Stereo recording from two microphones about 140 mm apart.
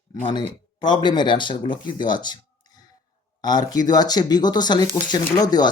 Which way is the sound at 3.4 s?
30° left (ahead or behind).